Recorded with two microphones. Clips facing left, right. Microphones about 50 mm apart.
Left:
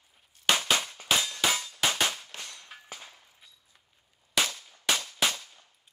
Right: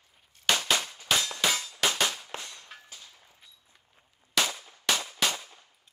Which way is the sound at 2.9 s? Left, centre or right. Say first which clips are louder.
Left 5 dB; left.